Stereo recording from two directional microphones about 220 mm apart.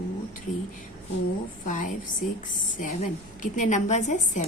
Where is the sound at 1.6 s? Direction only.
35° left (ahead or behind).